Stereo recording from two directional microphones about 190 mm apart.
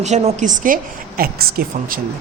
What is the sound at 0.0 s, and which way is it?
A woman's voice, 35° right (ahead or behind).